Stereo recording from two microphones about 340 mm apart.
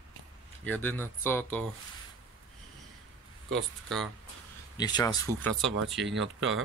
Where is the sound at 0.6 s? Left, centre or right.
Centre.